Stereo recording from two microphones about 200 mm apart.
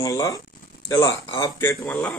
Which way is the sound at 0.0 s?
15° left (ahead or behind).